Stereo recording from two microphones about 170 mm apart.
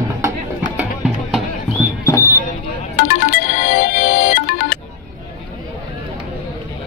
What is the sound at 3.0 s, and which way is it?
Music, 60° left (ahead or behind).